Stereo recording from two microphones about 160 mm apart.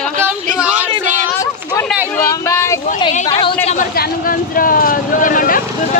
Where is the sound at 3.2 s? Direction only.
30° left (ahead or behind).